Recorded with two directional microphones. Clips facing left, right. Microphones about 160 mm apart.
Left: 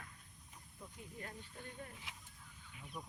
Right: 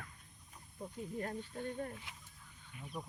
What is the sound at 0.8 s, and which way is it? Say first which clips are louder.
Speech: right 10 dB; 45° right (ahead or behind).